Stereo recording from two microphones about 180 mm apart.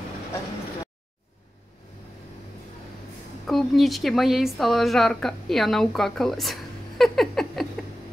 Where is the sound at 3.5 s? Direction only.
Centre (ahead or behind).